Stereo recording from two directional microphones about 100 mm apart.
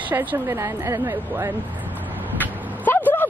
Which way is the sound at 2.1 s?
20° right (ahead or behind).